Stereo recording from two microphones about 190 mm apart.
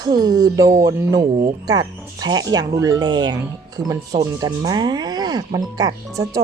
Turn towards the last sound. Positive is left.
turn(degrees=-20)  # may be behind; listen again after turning